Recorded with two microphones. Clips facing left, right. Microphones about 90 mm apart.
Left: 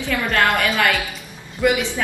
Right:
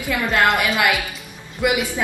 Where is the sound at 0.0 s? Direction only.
15° right (ahead or behind).